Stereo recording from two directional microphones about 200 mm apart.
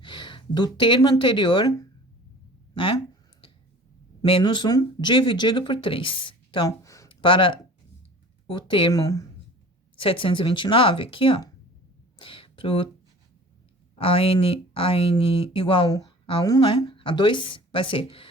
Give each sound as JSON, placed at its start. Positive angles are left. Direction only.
{"t": 0.0, "sound": "speech", "side_deg": 25}
{"t": 4.2, "sound": "speech", "side_deg": 20}
{"t": 12.2, "sound": "a sound", "side_deg": 25}
{"t": 14.0, "sound": "speech", "side_deg": 25}